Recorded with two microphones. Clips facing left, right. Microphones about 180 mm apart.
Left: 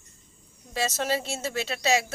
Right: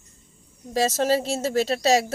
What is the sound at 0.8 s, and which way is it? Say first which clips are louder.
Speech: right 6 dB; 40° right (ahead or behind).